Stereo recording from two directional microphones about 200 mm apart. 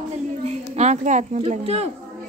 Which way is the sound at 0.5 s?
35° right (ahead or behind).